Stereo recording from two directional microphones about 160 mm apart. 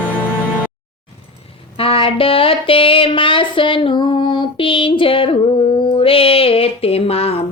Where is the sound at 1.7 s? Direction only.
35° left (ahead or behind).